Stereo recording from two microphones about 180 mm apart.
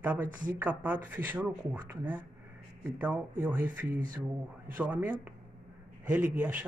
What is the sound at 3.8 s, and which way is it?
Speech, 50° right (ahead or behind).